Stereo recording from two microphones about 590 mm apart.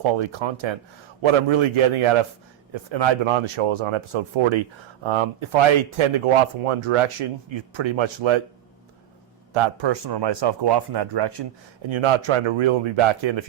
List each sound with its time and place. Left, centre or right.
0.0 s speech: right
9.5 s speech: right